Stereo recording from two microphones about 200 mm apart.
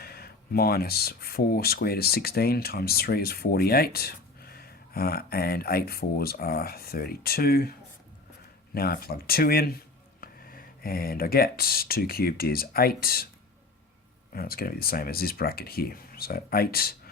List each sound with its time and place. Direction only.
0.0 s speech: 50° left (ahead or behind)
8.7 s speech: 50° left (ahead or behind)
14.3 s speech: 50° left (ahead or behind)